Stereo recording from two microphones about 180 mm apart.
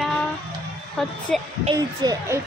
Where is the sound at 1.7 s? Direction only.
20° right (ahead or behind).